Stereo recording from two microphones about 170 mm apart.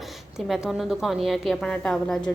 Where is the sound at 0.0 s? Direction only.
Centre (ahead or behind).